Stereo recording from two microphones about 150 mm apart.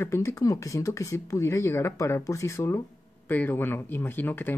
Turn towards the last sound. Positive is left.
turn(degrees=10)  # may be behind; listen again after turning